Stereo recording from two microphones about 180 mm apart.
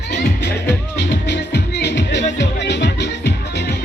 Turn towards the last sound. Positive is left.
turn(degrees=70)  # may be behind; listen again after turning